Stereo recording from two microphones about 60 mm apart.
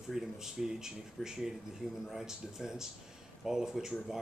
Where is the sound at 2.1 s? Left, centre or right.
Centre.